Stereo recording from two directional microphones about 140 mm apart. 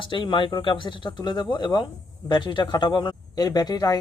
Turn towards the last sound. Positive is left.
turn(degrees=25)  # may be behind; listen again after turning